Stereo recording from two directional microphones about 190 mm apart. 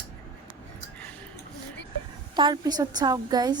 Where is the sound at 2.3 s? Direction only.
25° right (ahead or behind).